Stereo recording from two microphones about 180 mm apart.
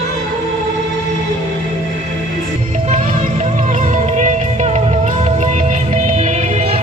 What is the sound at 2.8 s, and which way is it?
Music, 40° right (ahead or behind).